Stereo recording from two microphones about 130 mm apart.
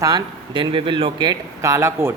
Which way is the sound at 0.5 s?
40° right (ahead or behind).